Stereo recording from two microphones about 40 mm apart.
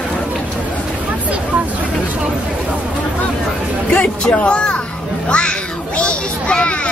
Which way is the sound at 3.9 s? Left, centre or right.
Left.